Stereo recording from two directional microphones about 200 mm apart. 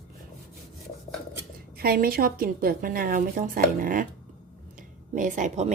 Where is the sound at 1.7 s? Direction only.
50° right (ahead or behind).